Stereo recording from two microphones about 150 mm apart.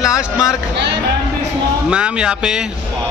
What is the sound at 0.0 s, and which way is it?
Speech, 20° left (ahead or behind).